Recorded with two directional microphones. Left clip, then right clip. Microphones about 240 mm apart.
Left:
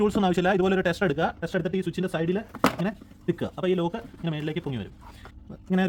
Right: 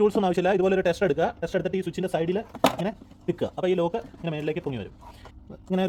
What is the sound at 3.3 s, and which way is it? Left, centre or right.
Speech, left.